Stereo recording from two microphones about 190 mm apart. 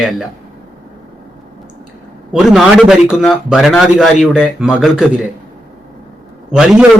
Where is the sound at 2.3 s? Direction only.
Centre (ahead or behind).